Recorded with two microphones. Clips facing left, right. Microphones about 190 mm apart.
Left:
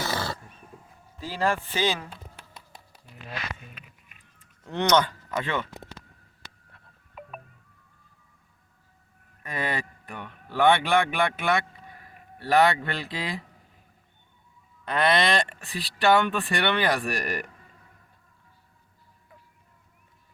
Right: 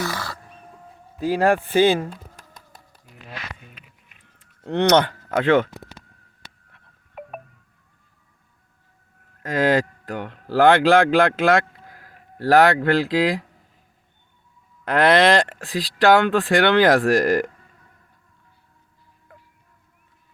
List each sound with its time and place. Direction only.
0.0 s wild animals: 25° left (ahead or behind)
1.2 s speech: 60° right (ahead or behind)
4.4 s speech: 65° right (ahead or behind); by 5.6 s 85° right
9.4 s speech: 90° right
14.8 s speech: 90° right